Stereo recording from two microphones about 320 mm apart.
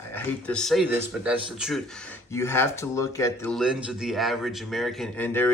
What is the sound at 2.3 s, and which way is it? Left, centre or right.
Speech, centre.